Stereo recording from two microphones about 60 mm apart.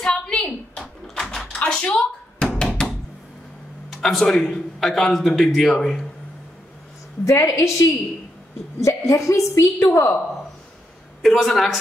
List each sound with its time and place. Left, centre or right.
0.0 s a sound: centre
1.0 s door: centre
3.9 s a man's voice: centre
7.2 s a woman's voice: left
11.2 s a man's voice: centre